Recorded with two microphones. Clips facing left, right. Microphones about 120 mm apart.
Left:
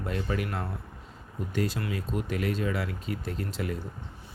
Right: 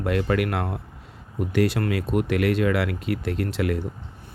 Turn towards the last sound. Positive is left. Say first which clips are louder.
# right 8 dB
turn(degrees=-80)